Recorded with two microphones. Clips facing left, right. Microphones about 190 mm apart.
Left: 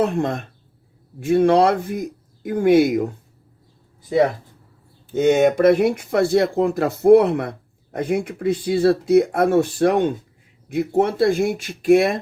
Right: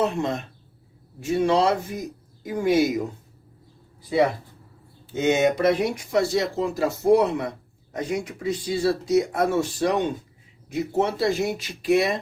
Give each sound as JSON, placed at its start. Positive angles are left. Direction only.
{"t": 0.0, "sound": "speech", "side_deg": 50}
{"t": 5.1, "sound": "speech", "side_deg": 50}